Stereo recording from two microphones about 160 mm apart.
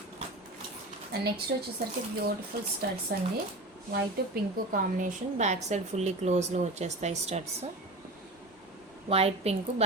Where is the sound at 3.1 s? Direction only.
75° right (ahead or behind).